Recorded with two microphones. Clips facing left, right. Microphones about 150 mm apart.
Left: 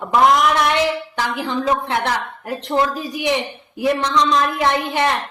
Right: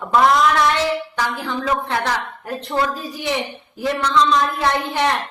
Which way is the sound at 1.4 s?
15° left (ahead or behind).